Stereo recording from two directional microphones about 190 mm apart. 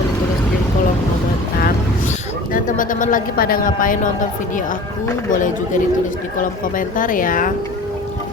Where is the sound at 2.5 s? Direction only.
45° left (ahead or behind).